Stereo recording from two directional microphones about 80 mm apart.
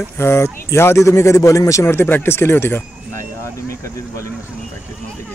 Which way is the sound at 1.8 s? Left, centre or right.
Left.